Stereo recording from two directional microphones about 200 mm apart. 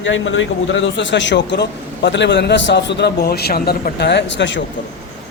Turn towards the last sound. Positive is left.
turn(degrees=65)  # may be behind; listen again after turning